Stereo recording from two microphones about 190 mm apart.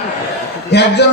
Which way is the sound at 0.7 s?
60° left (ahead or behind).